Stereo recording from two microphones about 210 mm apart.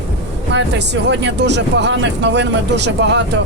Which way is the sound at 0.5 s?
60° right (ahead or behind).